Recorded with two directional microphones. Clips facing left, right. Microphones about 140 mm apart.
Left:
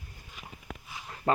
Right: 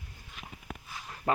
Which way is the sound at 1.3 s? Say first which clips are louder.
Left 2 dB; centre (ahead or behind).